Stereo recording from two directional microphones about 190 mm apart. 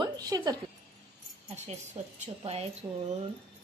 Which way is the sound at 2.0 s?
35° right (ahead or behind).